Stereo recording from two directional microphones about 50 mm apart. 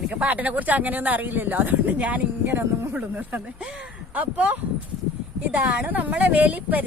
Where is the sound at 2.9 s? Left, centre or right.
Right.